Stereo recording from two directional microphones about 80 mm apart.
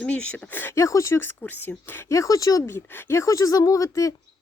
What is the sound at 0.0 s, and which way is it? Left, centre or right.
Speech, centre.